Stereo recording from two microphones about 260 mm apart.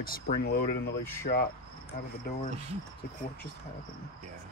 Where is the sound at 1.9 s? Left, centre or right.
Left.